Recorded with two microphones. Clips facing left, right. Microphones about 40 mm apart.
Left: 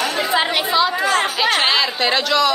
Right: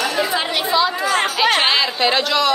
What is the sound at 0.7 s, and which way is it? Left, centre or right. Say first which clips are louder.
A woman's voice: right 2 dB; centre.